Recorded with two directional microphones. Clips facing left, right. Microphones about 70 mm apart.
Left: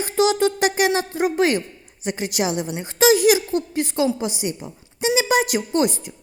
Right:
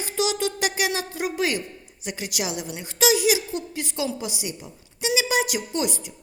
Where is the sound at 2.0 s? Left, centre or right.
Left.